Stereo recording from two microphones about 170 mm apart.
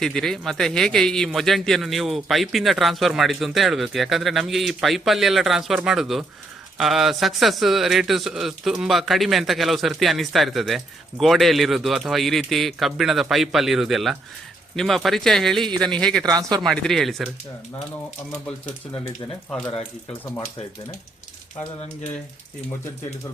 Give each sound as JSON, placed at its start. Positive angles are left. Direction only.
{"t": 0.0, "sound": "speech", "side_deg": 5}
{"t": 16.3, "sound": "speech", "side_deg": -20}
{"t": 16.6, "sound": "speech", "side_deg": 5}